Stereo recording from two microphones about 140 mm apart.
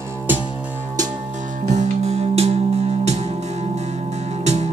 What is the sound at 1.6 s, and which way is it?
Music, 55° right (ahead or behind).